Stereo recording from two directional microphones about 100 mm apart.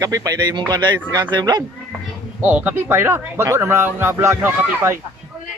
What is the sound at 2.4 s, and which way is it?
Speech, 20° right (ahead or behind).